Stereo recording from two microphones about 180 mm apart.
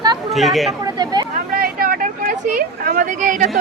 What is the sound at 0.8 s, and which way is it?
Speech, 20° right (ahead or behind).